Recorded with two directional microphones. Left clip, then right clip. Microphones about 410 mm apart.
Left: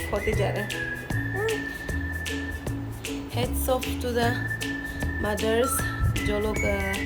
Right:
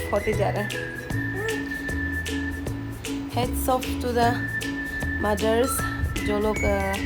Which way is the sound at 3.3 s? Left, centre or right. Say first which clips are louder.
Right 2 dB; centre.